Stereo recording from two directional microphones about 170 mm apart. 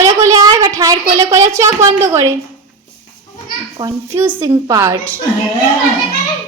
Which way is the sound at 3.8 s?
15° right (ahead or behind).